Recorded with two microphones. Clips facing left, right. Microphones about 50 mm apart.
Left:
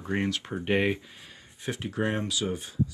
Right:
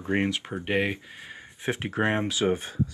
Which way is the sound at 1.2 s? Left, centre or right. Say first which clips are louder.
Right 6 dB; right.